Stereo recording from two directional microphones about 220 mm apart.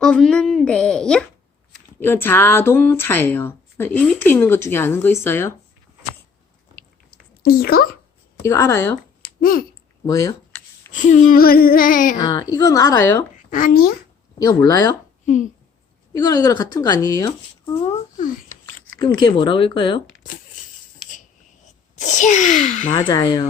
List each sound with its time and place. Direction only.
0.0 s a woman's voice: 5° left (ahead or behind)
6.7 s chewing: 40° left (ahead or behind)
8.4 s speech: 15° left (ahead or behind)
9.4 s owl: 40° left (ahead or behind)
10.1 s speech: 15° left (ahead or behind)
10.9 s speech: 35° left (ahead or behind)
12.1 s speech: 20° left (ahead or behind)
13.5 s speech: 35° left (ahead or behind)
14.3 s speech: 15° left (ahead or behind)
16.1 s speech: 15° left (ahead or behind)
17.8 s speech: 30° left (ahead or behind)
18.9 s speech: 20° left (ahead or behind)
21.7 s speech: 35° left (ahead or behind)
23.0 s speech: 15° left (ahead or behind)